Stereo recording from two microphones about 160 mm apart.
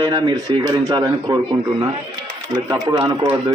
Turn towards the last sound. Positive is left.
turn(degrees=-25)  # may be behind; listen again after turning